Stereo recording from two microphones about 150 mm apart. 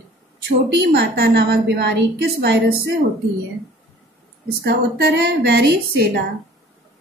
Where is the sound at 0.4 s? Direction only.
90° right.